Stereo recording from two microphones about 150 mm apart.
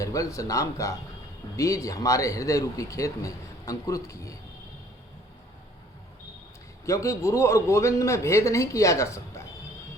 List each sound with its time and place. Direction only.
0.0 s a man's voice: 20° left (ahead or behind)
6.8 s a man's voice: 20° left (ahead or behind)